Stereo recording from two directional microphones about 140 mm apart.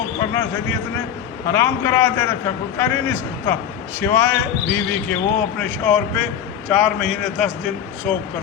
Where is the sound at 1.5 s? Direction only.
20° left (ahead or behind); by 7.5 s 5° left (ahead or behind).